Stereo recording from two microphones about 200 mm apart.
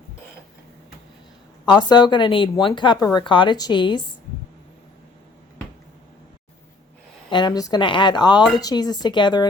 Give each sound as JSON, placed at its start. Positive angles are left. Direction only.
{"t": 1.9, "sound": "a woman's voice", "side_deg": 20}
{"t": 7.3, "sound": "a woman's voice", "side_deg": 20}